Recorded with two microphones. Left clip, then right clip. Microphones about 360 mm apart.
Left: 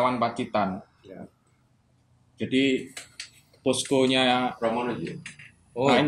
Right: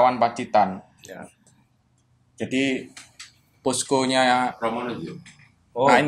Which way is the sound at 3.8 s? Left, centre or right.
Right.